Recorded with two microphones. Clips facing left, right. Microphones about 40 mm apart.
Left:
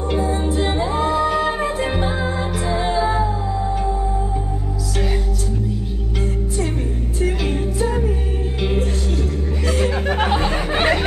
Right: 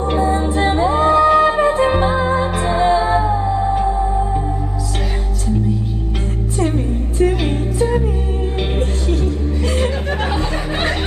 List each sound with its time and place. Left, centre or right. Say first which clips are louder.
0.1 s music: right 3 dB; right
1.9 s music: right 6 dB; right
7.2 s music: right 5 dB; right
9.7 s chuckle: even; right
10.5 s a sound: left 2 dB; left